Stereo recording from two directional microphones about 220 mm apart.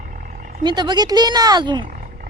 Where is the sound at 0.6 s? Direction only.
20° right (ahead or behind).